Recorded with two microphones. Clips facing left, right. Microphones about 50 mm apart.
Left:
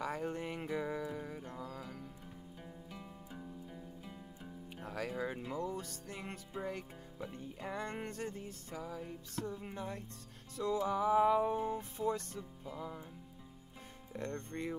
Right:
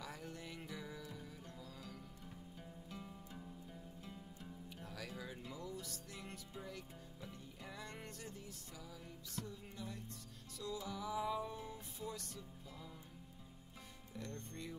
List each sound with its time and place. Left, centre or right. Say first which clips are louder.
0.0 s music: left 11 dB; left
2.9 s music: left 2 dB; centre
4.8 s music: left 11 dB; left
7.6 s music: left 10 dB; left
14.1 s music: left 8 dB; left